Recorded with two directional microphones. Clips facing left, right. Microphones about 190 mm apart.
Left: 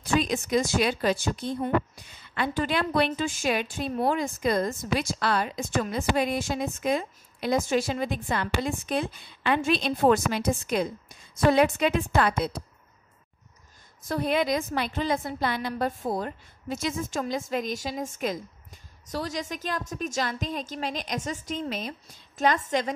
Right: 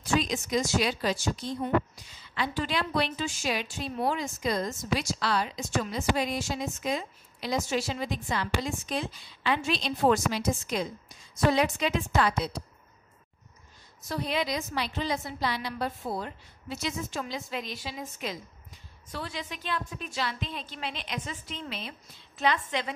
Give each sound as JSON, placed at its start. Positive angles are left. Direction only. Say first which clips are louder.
{"t": 0.1, "sound": "speech", "louder": "left 3 dB", "side_deg": 55}
{"t": 14.0, "sound": "a woman's voice", "louder": "left 5 dB", "side_deg": 50}